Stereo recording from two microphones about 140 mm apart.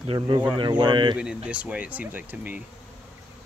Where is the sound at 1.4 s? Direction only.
10° right (ahead or behind).